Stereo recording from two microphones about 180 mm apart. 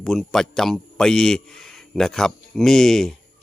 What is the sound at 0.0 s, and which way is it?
A man's voice, centre (ahead or behind).